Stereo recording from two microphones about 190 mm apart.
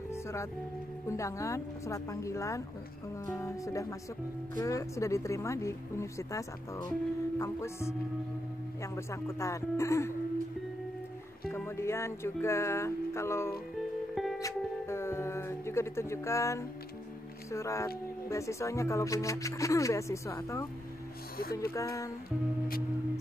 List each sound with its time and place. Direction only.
0.1 s music: 15° left (ahead or behind)
1.0 s speech: 15° left (ahead or behind)
8.9 s speech: 15° left (ahead or behind)
11.5 s speech: 15° left (ahead or behind)
14.1 s music: centre (ahead or behind)
14.4 s music: 15° left (ahead or behind)
17.5 s speech: 15° left (ahead or behind)
21.7 s speech: 15° left (ahead or behind)